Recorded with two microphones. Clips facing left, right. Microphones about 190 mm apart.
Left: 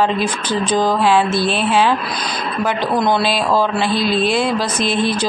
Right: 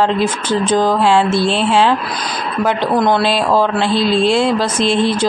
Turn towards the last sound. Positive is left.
turn(degrees=-25)  # may be behind; listen again after turning